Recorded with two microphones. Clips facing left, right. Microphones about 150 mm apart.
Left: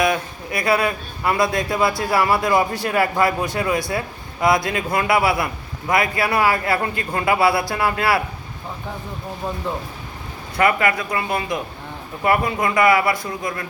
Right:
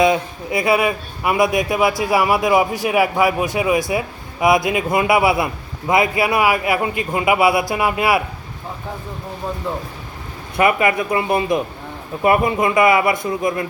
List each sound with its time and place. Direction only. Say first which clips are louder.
0.0 s a man's voice: right 4 dB; 20° right (ahead or behind)
10.6 s a man's voice: right 2 dB; 20° right (ahead or behind)